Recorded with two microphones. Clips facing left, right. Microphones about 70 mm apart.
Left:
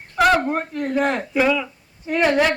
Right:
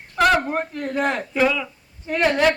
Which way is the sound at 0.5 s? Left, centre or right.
Centre.